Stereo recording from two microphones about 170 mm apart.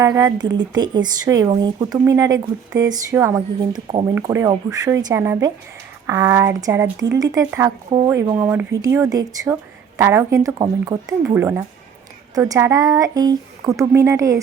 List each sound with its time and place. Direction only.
0.0 s speech: 20° right (ahead or behind)